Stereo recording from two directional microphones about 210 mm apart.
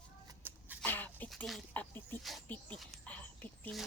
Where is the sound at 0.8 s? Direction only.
10° left (ahead or behind).